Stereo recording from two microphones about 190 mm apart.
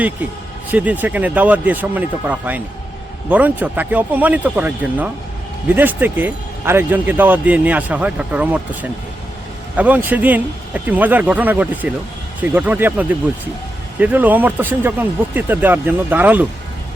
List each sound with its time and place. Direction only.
0.7 s speech: 10° right (ahead or behind)